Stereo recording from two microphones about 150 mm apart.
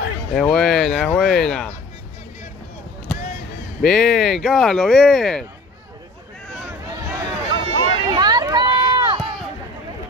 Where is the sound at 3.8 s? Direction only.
5° left (ahead or behind).